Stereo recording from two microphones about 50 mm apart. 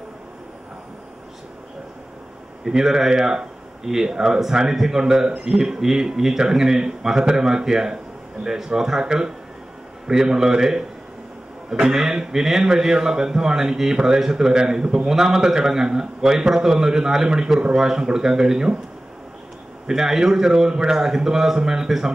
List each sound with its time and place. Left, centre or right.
2.6 s a man's voice: centre
19.9 s a man's voice: centre